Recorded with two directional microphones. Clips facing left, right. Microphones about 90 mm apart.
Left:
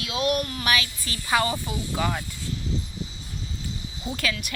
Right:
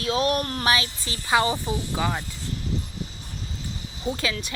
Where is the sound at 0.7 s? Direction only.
30° right (ahead or behind).